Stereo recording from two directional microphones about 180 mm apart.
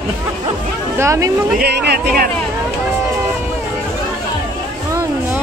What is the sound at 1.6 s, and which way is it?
Speech, 60° right (ahead or behind).